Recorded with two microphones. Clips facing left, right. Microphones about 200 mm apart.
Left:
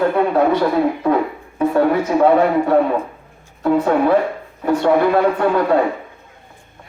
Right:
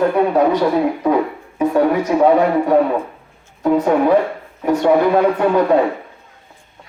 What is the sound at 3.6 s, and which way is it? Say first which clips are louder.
Speech: right 1 dB; 15° right (ahead or behind).